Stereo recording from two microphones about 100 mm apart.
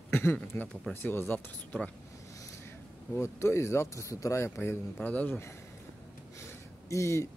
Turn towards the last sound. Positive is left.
turn(degrees=30)  # may be behind; listen again after turning